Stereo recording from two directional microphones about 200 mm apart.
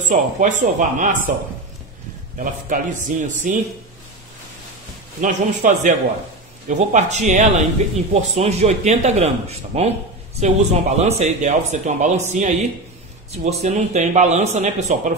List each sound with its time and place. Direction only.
0.1 s speech: 40° right (ahead or behind)
2.3 s speech: 40° right (ahead or behind)
5.2 s speech: 40° right (ahead or behind)